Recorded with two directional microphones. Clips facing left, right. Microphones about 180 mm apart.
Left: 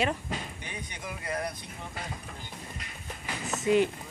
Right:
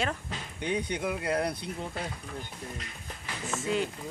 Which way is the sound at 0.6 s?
65° right (ahead or behind).